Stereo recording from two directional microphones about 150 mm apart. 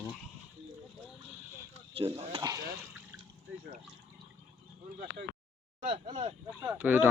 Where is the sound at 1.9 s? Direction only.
40° right (ahead or behind).